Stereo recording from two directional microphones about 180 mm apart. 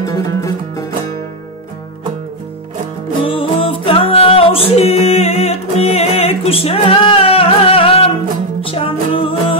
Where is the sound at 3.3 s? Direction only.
30° left (ahead or behind).